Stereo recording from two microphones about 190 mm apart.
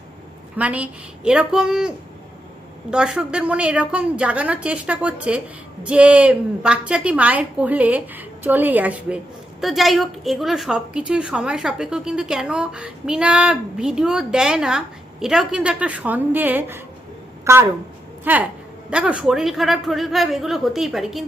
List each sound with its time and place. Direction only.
0.5 s a woman's voice: 5° right (ahead or behind)
2.9 s a woman's voice: 5° right (ahead or behind)